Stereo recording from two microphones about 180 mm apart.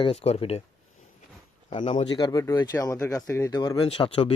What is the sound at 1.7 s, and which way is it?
Speech, 35° left (ahead or behind).